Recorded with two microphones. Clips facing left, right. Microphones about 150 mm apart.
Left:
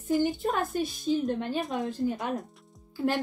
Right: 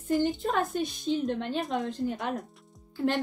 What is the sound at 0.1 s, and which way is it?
A woman's voice, centre (ahead or behind).